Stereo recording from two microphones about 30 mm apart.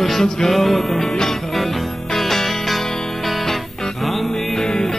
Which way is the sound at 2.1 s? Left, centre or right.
Centre.